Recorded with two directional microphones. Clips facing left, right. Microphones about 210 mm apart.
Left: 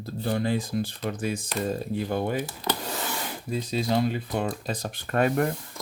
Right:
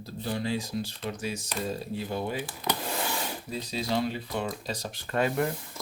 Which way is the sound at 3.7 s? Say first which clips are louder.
Left 4 dB; 50° left (ahead or behind).